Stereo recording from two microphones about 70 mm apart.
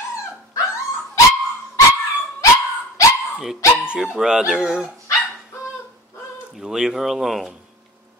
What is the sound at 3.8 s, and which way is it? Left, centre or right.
Speech, centre.